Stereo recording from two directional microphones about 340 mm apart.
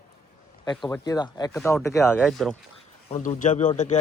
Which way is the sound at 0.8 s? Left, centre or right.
Centre.